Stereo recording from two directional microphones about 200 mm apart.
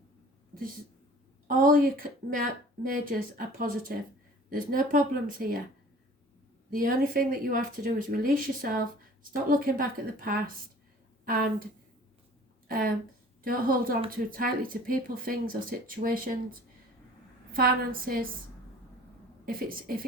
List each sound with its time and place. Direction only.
1.5 s a woman's voice: 45° right (ahead or behind)
6.7 s a woman's voice: 45° right (ahead or behind)
12.6 s a woman's voice: 45° right (ahead or behind)
19.5 s a woman's voice: 45° right (ahead or behind)